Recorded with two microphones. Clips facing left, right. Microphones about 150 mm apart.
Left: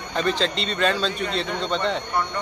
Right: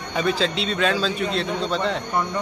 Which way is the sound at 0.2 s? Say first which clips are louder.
Right 1 dB; 5° right (ahead or behind).